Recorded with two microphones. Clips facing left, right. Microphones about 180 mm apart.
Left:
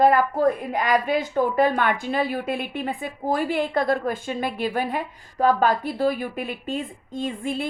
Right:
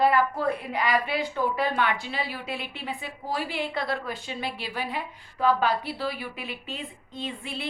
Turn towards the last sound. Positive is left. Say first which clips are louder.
# left 8 dB
turn(degrees=45)  # may be behind; listen again after turning